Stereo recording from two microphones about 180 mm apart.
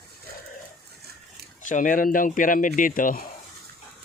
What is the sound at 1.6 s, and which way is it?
Speech, 45° left (ahead or behind).